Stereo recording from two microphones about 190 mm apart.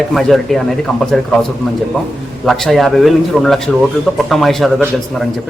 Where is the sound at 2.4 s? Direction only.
Centre (ahead or behind).